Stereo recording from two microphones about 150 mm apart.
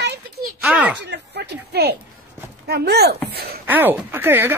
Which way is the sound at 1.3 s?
90° right.